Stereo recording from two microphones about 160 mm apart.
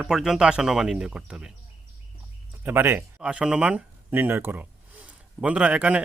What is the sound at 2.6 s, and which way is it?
Speech, 10° right (ahead or behind).